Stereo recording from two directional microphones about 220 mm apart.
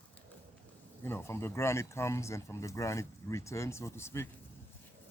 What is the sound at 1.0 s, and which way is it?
Speech, 10° left (ahead or behind).